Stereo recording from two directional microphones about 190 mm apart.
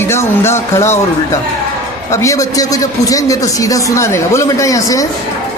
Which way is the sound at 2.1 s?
15° left (ahead or behind).